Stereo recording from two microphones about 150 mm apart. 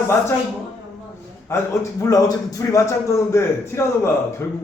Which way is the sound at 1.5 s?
20° left (ahead or behind).